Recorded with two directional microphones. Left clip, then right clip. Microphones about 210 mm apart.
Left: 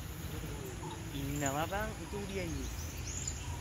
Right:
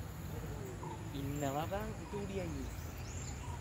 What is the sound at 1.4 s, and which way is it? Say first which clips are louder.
Speech: left 3 dB; 30° left (ahead or behind).